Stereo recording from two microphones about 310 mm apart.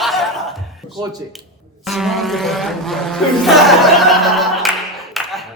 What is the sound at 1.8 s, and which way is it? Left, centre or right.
Speech, centre.